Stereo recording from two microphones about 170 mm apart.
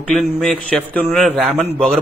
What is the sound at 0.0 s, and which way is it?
Speech, centre (ahead or behind).